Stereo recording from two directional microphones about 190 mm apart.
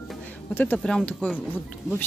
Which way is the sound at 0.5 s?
10° left (ahead or behind).